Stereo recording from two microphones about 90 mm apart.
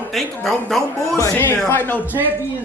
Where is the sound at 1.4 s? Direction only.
25° left (ahead or behind).